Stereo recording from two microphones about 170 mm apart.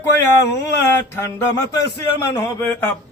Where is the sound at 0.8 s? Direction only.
15° left (ahead or behind).